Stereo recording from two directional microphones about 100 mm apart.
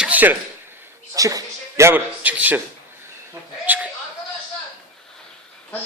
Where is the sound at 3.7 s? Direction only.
20° right (ahead or behind).